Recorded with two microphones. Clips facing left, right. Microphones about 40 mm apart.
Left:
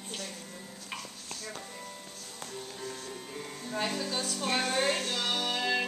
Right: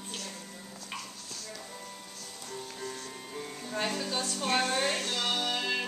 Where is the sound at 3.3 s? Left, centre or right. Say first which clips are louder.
Right 1 dB; centre.